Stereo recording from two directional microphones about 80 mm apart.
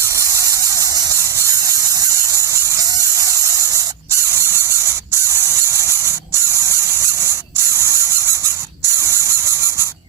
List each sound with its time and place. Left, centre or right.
0.0 s a sound: right
1.1 s squeal: right
7.7 s squeal: right